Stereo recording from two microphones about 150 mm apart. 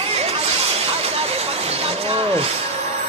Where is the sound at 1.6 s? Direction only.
40° right (ahead or behind).